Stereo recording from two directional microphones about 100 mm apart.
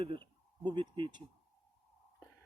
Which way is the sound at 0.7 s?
50° right (ahead or behind).